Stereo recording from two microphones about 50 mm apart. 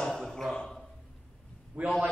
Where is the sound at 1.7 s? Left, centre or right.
Right.